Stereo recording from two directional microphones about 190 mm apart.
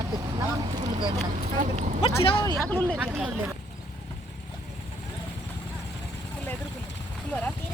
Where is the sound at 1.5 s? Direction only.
40° right (ahead or behind).